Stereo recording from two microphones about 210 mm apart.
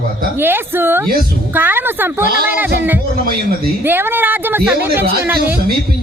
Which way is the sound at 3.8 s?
10° right (ahead or behind).